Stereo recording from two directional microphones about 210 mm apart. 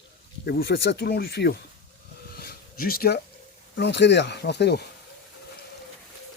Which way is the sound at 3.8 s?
55° left (ahead or behind).